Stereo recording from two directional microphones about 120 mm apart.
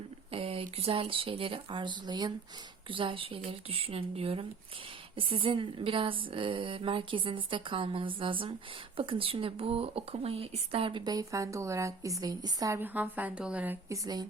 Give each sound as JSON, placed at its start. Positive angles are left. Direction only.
{"t": 0.3, "sound": "speech", "side_deg": -55}
{"t": 12.8, "sound": "a woman's voice", "side_deg": -15}
{"t": 13.9, "sound": "speech", "side_deg": -30}